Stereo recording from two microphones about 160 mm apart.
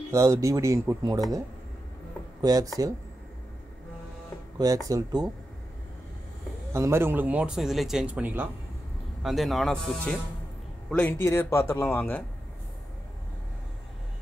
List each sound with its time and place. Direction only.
0.1 s speech: 20° right (ahead or behind)
2.4 s speech: 25° right (ahead or behind)
4.6 s speech: 20° right (ahead or behind)
6.7 s speech: 15° right (ahead or behind); by 12.2 s 15° left (ahead or behind)